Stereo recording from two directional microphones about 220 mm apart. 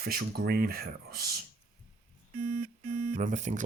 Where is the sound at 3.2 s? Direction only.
35° right (ahead or behind).